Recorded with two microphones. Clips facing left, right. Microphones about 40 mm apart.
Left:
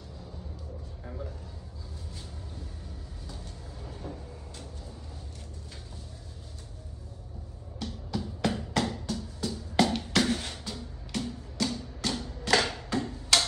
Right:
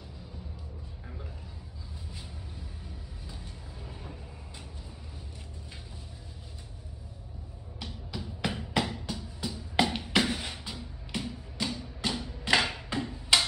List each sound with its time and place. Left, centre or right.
1.0 s a sound: centre
3.3 s vehicle: centre
7.8 s music: centre